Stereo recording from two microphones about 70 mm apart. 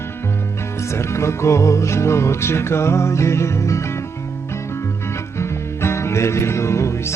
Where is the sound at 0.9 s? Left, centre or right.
Left.